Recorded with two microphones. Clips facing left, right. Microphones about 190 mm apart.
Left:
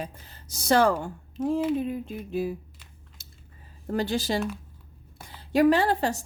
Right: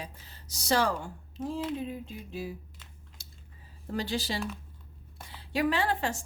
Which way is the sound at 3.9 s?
50° left (ahead or behind).